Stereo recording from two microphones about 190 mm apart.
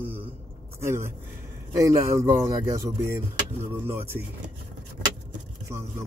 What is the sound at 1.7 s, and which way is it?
Speech, 15° right (ahead or behind).